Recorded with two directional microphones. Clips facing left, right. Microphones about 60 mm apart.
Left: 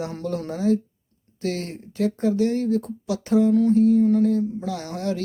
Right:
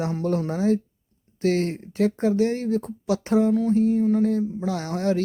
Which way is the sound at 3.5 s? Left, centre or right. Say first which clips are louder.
Left 3 dB; centre.